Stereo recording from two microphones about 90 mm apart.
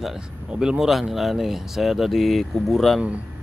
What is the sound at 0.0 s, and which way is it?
Speech, 5° right (ahead or behind).